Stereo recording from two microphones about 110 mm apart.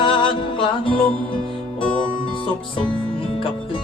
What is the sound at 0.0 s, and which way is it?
Music, 50° left (ahead or behind).